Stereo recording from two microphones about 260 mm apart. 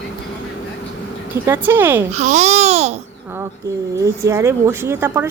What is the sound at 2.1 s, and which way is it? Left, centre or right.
Speech, right.